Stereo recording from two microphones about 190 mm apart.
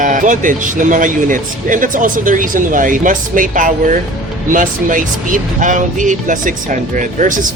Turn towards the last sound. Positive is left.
turn(degrees=-40)  # may be behind; listen again after turning